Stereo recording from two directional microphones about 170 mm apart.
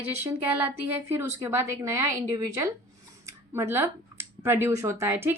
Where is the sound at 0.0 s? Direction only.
15° right (ahead or behind).